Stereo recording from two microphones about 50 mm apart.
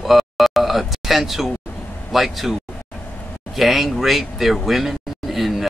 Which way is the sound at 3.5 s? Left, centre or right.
Centre.